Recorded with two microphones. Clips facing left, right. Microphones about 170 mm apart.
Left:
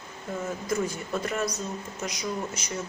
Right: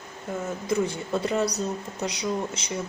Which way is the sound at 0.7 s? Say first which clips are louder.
Right 4 dB; 30° right (ahead or behind).